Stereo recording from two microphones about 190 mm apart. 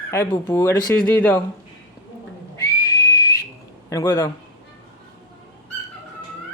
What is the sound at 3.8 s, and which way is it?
Speech, 15° left (ahead or behind).